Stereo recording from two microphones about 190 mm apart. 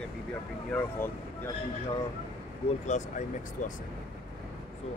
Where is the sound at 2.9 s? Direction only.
40° left (ahead or behind).